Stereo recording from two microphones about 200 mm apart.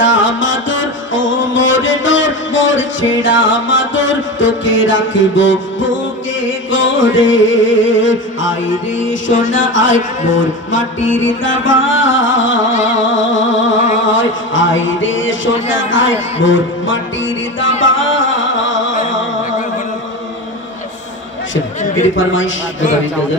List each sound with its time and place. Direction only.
0.0 s music: 70° left (ahead or behind)
13.1 s a sound: 70° left (ahead or behind)
14.1 s speech: 70° left (ahead or behind)
15.8 s music: 70° left (ahead or behind)
21.8 s a sound: 35° left (ahead or behind)
22.1 s music: 70° left (ahead or behind)